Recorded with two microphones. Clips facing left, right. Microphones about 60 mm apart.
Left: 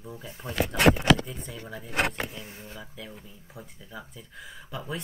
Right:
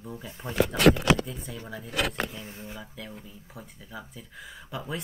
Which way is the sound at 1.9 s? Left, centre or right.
Left.